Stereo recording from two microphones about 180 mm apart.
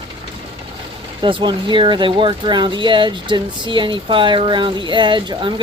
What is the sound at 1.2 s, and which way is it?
Speech, 25° right (ahead or behind).